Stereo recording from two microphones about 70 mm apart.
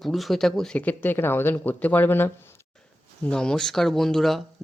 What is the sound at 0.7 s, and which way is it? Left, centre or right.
Speech, left.